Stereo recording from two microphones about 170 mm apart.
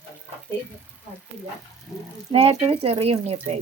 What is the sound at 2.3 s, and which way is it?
Speech, 35° right (ahead or behind).